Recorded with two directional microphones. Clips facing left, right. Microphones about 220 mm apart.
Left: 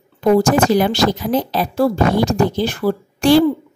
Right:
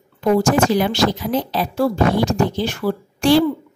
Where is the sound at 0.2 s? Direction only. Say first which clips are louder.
Left 2 dB; 40° left (ahead or behind).